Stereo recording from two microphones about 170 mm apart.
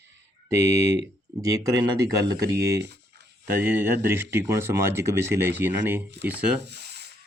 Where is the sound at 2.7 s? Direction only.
80° right.